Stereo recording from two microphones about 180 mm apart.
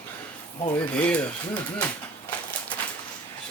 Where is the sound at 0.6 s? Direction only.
25° left (ahead or behind).